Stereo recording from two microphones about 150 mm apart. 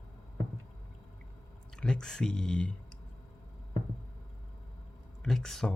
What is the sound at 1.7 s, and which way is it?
Speech, 5° left (ahead or behind).